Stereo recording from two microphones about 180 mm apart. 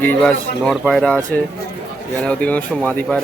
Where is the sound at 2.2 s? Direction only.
5° left (ahead or behind).